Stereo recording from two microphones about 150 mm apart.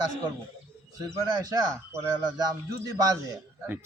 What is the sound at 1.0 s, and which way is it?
A man's voice, 25° right (ahead or behind).